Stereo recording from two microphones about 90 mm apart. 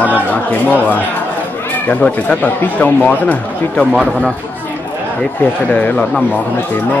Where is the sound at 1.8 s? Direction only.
15° left (ahead or behind).